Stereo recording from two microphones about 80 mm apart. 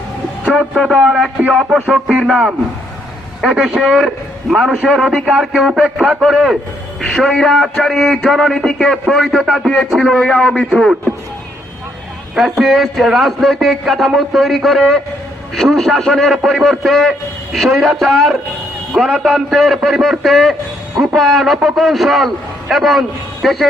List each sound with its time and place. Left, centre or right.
0.6 s a man's voice: centre
0.9 s a man's voice: centre
12.3 s a man's voice: centre